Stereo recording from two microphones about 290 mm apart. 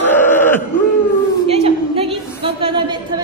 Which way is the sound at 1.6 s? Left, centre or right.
Centre.